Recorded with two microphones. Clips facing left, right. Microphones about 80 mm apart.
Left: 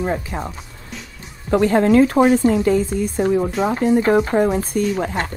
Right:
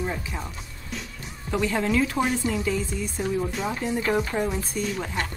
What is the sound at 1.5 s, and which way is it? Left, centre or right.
A woman's voice, left.